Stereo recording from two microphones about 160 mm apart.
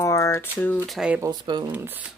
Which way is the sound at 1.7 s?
10° right (ahead or behind).